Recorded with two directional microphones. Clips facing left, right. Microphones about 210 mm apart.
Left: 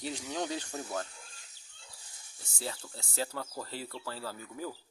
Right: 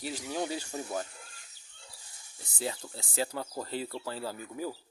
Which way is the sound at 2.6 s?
15° right (ahead or behind).